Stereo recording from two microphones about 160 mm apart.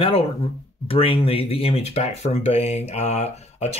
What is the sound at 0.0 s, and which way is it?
Speech, 35° left (ahead or behind).